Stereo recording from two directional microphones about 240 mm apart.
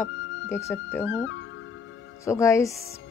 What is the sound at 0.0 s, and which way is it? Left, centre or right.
Speech, centre.